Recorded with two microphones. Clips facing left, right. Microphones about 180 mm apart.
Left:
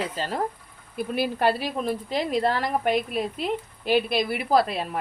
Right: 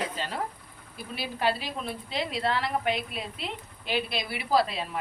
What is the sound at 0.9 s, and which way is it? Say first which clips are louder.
A woman's voice: left 9 dB; 50° left (ahead or behind).